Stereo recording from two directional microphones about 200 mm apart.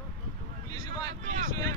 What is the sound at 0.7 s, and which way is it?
Speech, 20° left (ahead or behind).